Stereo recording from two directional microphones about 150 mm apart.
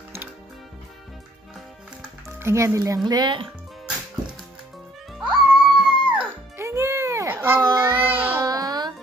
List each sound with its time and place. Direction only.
2.2 s speech: 20° right (ahead or behind); by 3.5 s 35° right (ahead or behind)
5.2 s music: 5° right (ahead or behind)
6.6 s child singing: 20° right (ahead or behind)
8.5 s music: 25° right (ahead or behind)